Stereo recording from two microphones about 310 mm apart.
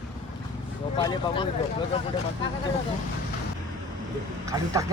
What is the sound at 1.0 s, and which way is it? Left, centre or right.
Speech, centre.